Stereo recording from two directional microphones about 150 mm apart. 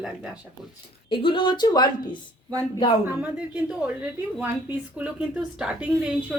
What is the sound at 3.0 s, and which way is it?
A woman's voice, 10° right (ahead or behind).